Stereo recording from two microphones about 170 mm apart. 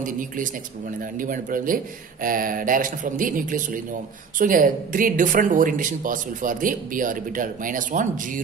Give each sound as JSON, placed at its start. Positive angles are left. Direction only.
{"t": 1.1, "sound": "speech", "side_deg": -50}